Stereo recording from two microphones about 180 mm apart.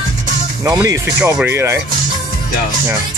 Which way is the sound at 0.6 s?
15° right (ahead or behind).